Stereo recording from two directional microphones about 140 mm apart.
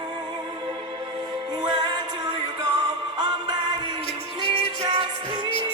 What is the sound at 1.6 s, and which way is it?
Music, 30° right (ahead or behind).